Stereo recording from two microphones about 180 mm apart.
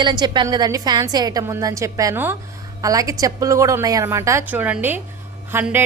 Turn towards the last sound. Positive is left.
turn(degrees=-10)  # may be behind; listen again after turning